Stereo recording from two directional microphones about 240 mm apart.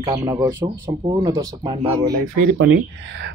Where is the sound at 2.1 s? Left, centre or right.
Right.